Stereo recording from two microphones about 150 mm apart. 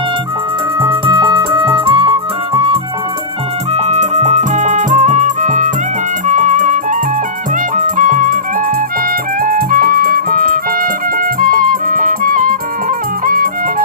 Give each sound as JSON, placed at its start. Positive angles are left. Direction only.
{"t": 0.8, "sound": "music", "side_deg": -35}
{"t": 3.7, "sound": "music", "side_deg": -45}
{"t": 7.9, "sound": "music", "side_deg": -60}
{"t": 9.4, "sound": "music", "side_deg": -70}